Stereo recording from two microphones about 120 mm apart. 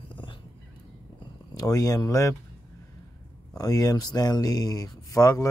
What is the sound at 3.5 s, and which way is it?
Speech, 30° left (ahead or behind).